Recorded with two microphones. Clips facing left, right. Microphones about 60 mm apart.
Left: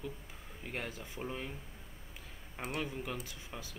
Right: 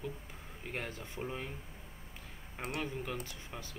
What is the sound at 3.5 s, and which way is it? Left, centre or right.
Speech, centre.